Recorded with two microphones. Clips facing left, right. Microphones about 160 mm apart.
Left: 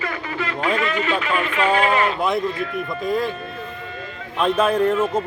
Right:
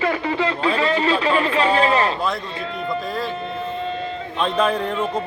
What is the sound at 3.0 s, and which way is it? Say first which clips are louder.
Speech: left 4 dB; 20° left (ahead or behind).